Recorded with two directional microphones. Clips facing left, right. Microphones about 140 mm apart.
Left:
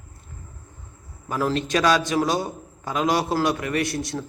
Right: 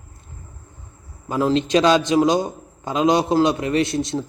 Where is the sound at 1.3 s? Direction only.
20° right (ahead or behind).